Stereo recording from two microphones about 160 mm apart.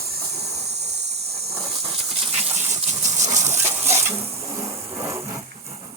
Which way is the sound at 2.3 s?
45° right (ahead or behind).